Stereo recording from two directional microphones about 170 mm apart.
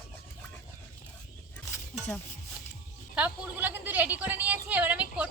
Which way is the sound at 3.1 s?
10° right (ahead or behind).